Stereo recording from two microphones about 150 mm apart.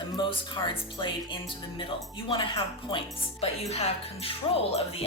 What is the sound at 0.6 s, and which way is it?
Speech, 35° left (ahead or behind).